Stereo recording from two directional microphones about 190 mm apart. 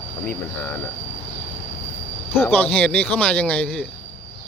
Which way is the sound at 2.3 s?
10° left (ahead or behind).